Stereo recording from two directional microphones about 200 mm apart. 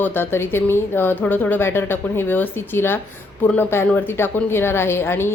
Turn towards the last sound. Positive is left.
turn(degrees=10)  # may be behind; listen again after turning